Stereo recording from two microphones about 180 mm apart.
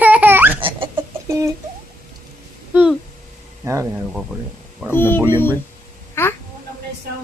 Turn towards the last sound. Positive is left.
turn(degrees=15)  # may be behind; listen again after turning